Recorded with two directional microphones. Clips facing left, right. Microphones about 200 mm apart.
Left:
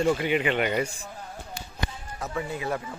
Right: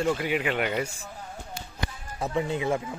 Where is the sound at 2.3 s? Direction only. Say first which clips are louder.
Right 4 dB; 20° right (ahead or behind).